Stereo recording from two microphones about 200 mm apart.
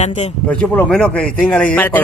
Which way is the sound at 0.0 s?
35° left (ahead or behind).